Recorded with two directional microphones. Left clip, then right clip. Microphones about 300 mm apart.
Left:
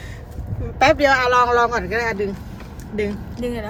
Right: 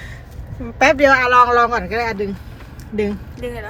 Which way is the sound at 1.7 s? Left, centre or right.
Centre.